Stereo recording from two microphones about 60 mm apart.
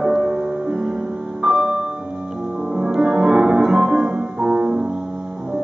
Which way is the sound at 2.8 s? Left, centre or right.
Centre.